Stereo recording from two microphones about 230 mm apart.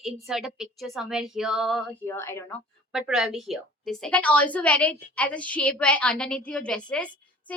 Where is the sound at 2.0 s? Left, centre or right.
Centre.